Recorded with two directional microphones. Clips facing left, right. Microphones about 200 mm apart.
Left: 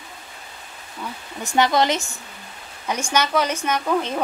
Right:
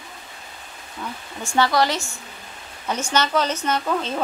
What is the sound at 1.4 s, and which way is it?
A woman's voice, 20° left (ahead or behind).